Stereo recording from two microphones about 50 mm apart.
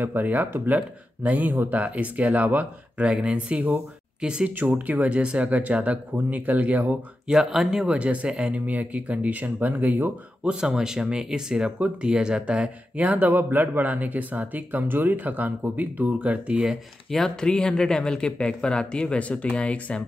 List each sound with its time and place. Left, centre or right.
0.0 s speech: right
3.1 s speech: right
4.5 s speech: right
7.2 s speech: centre
7.9 s speech: right
10.4 s speech: centre
13.3 s speech: right
17.4 s speech: centre